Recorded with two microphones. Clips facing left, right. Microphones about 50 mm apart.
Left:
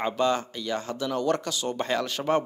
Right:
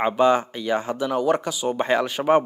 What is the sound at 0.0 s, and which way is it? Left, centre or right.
Speech, centre.